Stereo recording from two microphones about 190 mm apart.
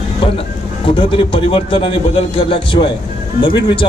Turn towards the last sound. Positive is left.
turn(degrees=25)  # may be behind; listen again after turning